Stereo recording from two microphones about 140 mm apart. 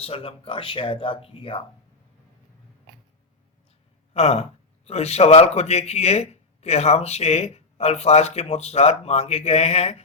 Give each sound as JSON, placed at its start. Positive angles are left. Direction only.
{"t": 0.0, "sound": "speech", "side_deg": 40}
{"t": 4.1, "sound": "speech", "side_deg": 50}